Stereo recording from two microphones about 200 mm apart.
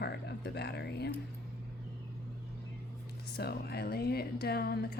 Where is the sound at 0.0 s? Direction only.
55° left (ahead or behind).